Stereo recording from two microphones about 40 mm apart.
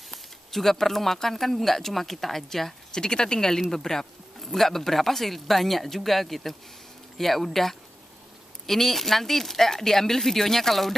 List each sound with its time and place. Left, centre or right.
0.1 s speech: centre
2.9 s speech: centre